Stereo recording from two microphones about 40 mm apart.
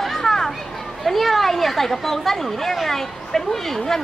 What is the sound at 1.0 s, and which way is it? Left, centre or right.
Speech, centre.